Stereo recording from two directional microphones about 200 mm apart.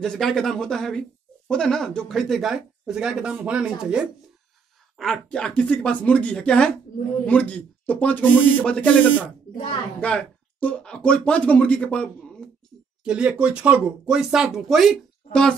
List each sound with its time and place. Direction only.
0.0 s speech: centre (ahead or behind)